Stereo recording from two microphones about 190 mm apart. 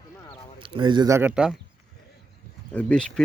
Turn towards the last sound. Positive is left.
turn(degrees=5)  # may be behind; listen again after turning